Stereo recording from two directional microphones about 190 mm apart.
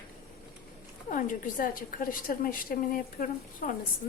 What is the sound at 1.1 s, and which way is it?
A woman's voice, 45° left (ahead or behind).